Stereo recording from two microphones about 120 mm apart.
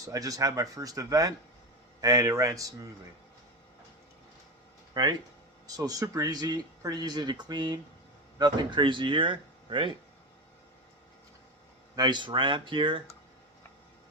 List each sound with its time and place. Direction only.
0.0 s speech: 30° right (ahead or behind)
4.9 s speech: 35° right (ahead or behind)
11.9 s speech: 40° right (ahead or behind)